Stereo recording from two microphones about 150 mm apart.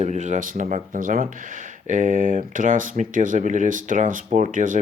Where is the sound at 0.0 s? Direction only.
50° right (ahead or behind).